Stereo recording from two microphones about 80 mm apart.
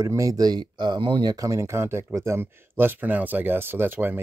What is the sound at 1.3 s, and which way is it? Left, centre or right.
Speech, right.